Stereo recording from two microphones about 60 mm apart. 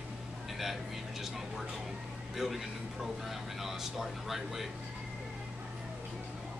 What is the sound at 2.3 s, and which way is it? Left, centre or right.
Speech, centre.